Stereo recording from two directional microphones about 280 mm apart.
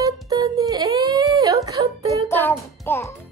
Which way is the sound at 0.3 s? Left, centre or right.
Centre.